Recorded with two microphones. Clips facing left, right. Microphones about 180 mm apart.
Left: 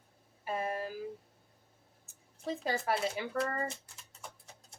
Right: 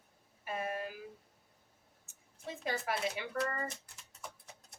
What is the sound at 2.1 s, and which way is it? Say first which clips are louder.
Speech: left 7 dB; 35° left (ahead or behind).